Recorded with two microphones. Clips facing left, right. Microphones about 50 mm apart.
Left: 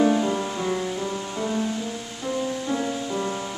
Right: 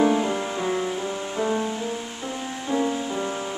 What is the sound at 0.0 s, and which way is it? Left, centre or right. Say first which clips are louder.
Music: even; centre.